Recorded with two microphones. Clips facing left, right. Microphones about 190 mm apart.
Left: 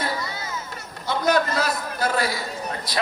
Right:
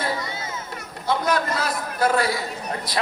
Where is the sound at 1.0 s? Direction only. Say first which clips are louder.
Left 1 dB; 30° right (ahead or behind).